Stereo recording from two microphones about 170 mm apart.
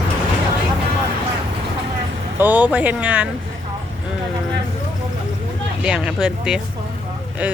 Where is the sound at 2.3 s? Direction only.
10° right (ahead or behind).